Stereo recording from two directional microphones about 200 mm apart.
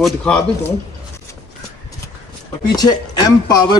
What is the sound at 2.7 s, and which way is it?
Speech, 20° left (ahead or behind).